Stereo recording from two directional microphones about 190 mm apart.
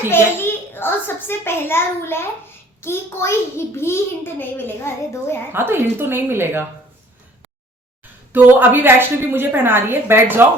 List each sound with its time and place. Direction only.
0.3 s a child's voice: 10° left (ahead or behind)
5.5 s a woman's voice: 10° right (ahead or behind)
8.3 s a woman's voice: 10° right (ahead or behind)